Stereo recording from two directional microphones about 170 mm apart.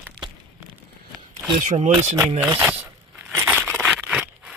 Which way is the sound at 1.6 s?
45° right (ahead or behind).